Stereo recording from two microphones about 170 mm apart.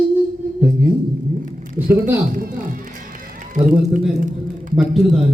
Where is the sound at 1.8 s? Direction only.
10° right (ahead or behind).